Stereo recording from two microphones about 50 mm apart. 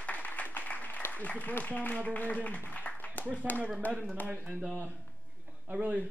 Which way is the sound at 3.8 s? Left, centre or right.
Left.